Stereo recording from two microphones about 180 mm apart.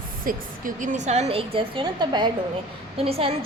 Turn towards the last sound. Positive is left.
turn(degrees=-30)  # may be behind; listen again after turning